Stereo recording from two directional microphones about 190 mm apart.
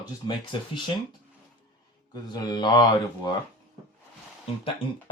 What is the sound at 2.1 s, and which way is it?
Speech, 20° left (ahead or behind).